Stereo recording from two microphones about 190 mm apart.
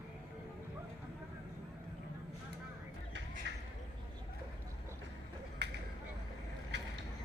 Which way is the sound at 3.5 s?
65° right (ahead or behind).